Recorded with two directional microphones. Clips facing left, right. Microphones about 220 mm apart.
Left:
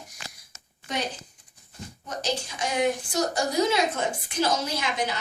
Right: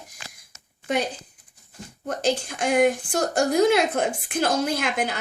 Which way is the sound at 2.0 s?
55° right (ahead or behind).